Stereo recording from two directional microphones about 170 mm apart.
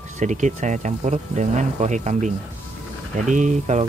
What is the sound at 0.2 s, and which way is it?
Speech, 45° right (ahead or behind).